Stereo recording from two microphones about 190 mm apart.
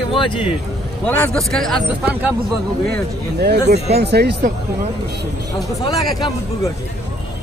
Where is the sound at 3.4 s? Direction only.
60° right (ahead or behind).